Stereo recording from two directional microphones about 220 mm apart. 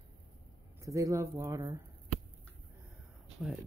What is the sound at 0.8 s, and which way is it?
A woman's voice, 15° right (ahead or behind).